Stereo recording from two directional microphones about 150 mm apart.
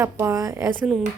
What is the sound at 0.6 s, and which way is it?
Speech, centre (ahead or behind).